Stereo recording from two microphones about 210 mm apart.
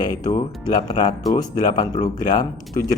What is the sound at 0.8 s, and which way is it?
Speech, 20° left (ahead or behind).